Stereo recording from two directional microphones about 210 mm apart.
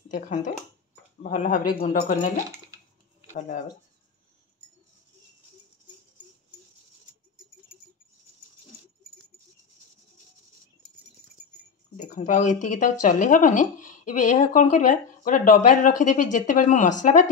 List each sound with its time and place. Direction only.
0.1 s speech: 40° left (ahead or behind)
12.0 s speech: 40° left (ahead or behind)